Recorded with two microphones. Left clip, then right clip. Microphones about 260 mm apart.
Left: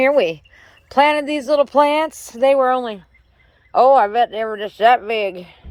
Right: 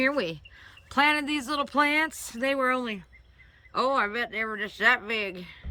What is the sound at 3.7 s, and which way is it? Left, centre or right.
Speech, centre.